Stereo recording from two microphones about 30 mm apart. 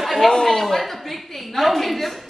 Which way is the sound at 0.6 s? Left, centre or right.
Centre.